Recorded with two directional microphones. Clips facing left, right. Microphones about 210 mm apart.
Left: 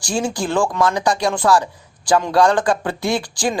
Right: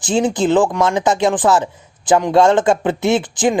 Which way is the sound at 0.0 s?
20° right (ahead or behind).